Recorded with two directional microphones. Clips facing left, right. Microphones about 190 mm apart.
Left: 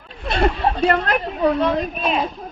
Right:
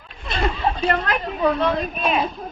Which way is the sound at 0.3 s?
60° left (ahead or behind).